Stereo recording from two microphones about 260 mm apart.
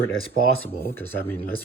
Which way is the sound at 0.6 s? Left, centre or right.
Centre.